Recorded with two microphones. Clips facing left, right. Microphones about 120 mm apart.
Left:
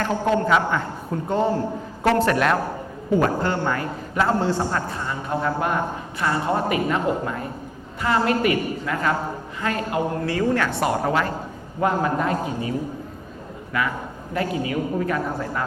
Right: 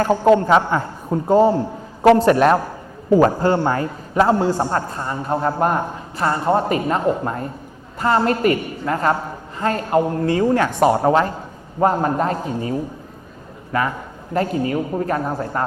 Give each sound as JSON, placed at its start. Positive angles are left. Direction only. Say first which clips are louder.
{"t": 0.0, "sound": "a man's voice", "louder": "right 7 dB", "side_deg": -35}
{"t": 1.1, "sound": "a man's voice", "louder": "right 7 dB", "side_deg": -25}
{"t": 10.2, "sound": "a man's voice", "louder": "right 5 dB", "side_deg": -25}
{"t": 13.7, "sound": "a man's voice", "louder": "right 4 dB", "side_deg": -40}